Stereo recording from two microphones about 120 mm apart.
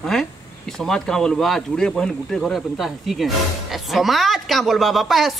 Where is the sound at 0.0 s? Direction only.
5° left (ahead or behind).